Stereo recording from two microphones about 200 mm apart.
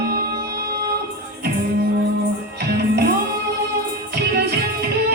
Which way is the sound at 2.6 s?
55° right (ahead or behind).